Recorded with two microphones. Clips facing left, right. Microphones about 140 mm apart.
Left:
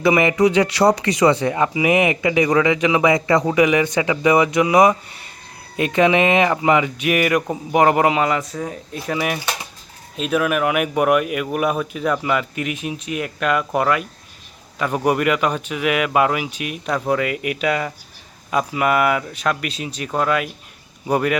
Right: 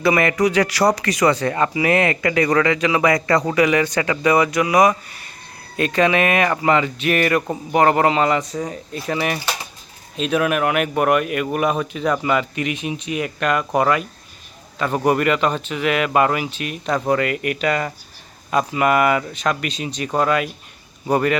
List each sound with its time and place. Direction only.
0.0 s a man's voice: 20° left (ahead or behind)